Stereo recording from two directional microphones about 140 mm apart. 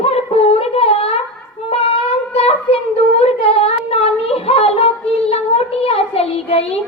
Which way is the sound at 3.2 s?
45° left (ahead or behind).